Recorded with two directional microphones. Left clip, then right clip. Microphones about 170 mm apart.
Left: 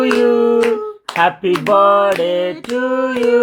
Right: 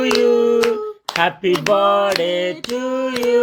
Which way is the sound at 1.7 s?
15° right (ahead or behind).